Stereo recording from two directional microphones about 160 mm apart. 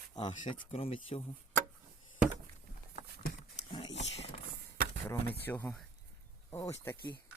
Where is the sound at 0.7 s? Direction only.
40° left (ahead or behind).